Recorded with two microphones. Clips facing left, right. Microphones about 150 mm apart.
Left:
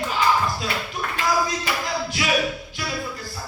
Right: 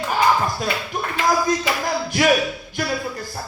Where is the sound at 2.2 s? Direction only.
50° right (ahead or behind).